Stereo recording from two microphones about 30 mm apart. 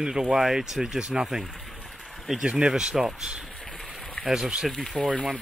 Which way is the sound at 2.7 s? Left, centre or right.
Centre.